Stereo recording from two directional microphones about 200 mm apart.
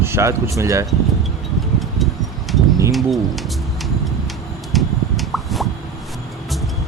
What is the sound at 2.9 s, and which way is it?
Speech, centre (ahead or behind).